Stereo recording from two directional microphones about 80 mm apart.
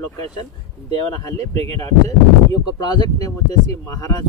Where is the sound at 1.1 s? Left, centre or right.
Left.